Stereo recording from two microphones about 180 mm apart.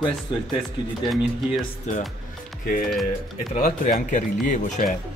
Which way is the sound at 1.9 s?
40° left (ahead or behind).